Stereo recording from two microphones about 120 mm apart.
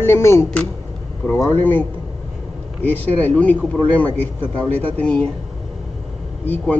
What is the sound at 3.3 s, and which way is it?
A man's voice, 10° left (ahead or behind).